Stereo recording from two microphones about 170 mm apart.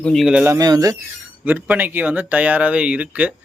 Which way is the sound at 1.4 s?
10° right (ahead or behind).